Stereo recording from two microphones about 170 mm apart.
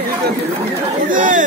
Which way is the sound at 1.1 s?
50° right (ahead or behind).